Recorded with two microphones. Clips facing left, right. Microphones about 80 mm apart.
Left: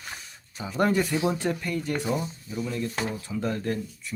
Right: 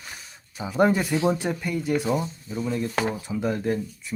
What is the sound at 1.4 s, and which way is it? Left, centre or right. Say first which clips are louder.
Speech: right 1 dB; centre.